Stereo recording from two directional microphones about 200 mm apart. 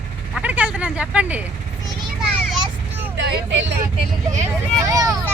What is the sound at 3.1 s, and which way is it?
Speech, 60° right (ahead or behind).